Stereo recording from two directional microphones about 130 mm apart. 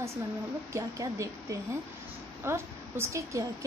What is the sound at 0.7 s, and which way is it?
A woman's voice, 20° right (ahead or behind).